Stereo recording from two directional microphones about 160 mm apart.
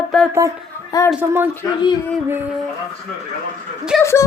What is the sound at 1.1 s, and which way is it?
Speech, 10° right (ahead or behind).